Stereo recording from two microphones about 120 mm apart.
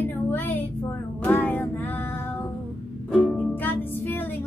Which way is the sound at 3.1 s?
10° left (ahead or behind).